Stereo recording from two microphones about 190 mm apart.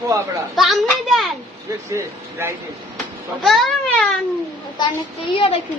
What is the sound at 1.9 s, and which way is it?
Speech, 15° right (ahead or behind).